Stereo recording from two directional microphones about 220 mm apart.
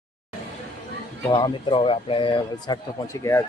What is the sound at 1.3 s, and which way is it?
Speech, 20° left (ahead or behind).